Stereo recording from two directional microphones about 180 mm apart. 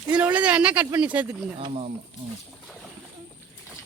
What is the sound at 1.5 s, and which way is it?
Speech, 35° right (ahead or behind).